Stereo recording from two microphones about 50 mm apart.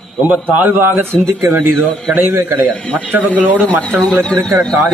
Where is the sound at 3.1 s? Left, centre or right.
Right.